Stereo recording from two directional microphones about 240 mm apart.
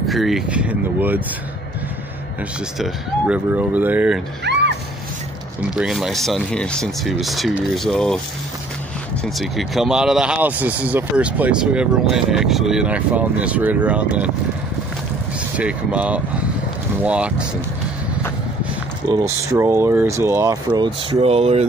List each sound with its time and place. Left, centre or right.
0.0 s speech: centre
2.8 s speech: centre
4.5 s music: right
5.6 s speech: centre
9.2 s speech: centre
15.5 s speech: centre
19.0 s speech: centre